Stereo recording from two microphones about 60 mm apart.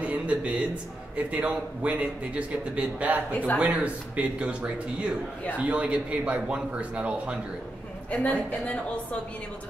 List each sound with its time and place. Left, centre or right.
0.0 s a sound: right
1.1 s a man's voice: right
8.1 s a woman's voice: left